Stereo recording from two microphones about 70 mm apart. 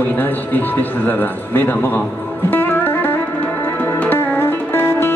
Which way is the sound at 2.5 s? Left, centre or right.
Left.